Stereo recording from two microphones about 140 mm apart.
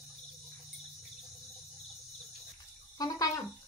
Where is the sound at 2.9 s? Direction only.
25° left (ahead or behind).